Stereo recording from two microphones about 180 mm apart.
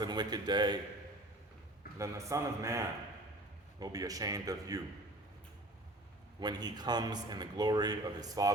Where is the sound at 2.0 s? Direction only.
15° right (ahead or behind).